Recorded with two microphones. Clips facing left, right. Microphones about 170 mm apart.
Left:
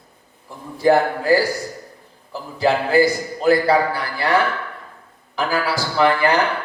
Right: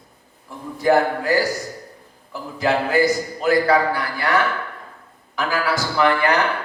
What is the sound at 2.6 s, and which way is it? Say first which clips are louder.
A man's voice: left 2 dB; 30° left (ahead or behind).